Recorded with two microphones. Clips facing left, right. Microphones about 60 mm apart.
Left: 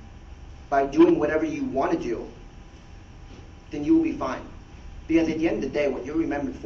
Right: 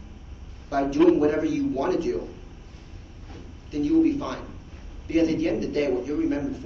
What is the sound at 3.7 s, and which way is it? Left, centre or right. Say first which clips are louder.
A man's voice: even; left.